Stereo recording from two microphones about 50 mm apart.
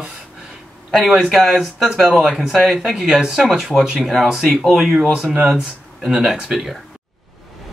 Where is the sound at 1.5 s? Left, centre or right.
Centre.